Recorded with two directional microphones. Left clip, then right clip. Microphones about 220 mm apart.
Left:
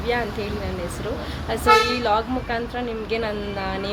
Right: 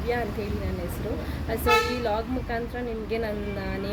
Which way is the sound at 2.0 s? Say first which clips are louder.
Left 6 dB; centre (ahead or behind).